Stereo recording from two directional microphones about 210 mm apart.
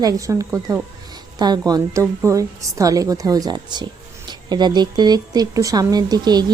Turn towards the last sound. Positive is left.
turn(degrees=-20)  # may be behind; listen again after turning